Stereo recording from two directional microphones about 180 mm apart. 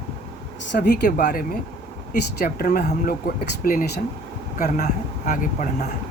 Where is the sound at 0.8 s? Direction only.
50° left (ahead or behind).